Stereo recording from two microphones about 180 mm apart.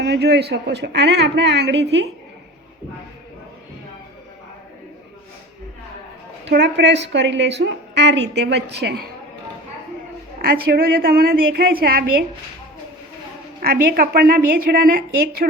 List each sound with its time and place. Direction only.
0.0 s a woman's voice: 65° right (ahead or behind)
6.4 s a woman's voice: 75° right (ahead or behind)
10.4 s a woman's voice: 55° right (ahead or behind)
13.6 s a woman's voice: 55° right (ahead or behind)